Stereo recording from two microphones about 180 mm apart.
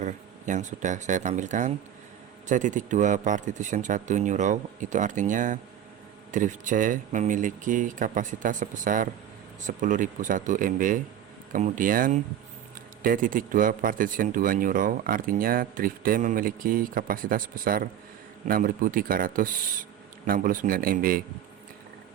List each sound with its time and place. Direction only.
0.0 s speech: 45° right (ahead or behind)